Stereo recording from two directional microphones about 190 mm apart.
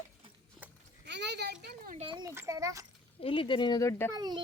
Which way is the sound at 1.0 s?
65° right (ahead or behind).